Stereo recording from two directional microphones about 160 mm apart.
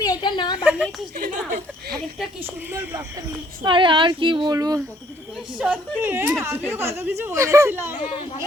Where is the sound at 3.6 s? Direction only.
30° right (ahead or behind).